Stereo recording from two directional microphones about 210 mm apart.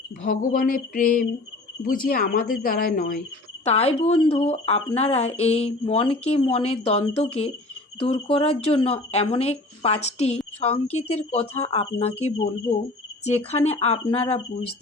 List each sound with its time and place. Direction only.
0.2 s speech: 40° left (ahead or behind)
3.6 s speech: 30° left (ahead or behind)